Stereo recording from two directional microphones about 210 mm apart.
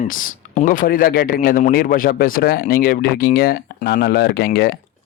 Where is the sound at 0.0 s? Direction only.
40° left (ahead or behind).